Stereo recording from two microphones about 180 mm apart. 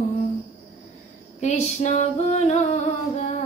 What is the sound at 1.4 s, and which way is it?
Female singing, 40° left (ahead or behind).